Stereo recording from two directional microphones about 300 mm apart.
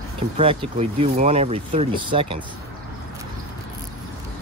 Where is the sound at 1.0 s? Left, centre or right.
Centre.